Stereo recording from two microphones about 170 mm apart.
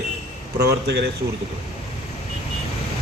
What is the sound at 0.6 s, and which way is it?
Speech, 75° right (ahead or behind).